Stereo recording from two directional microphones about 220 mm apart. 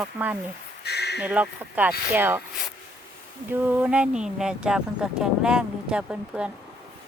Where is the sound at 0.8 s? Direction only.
50° left (ahead or behind).